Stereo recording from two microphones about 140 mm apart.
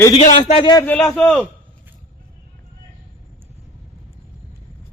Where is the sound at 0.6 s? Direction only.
30° left (ahead or behind).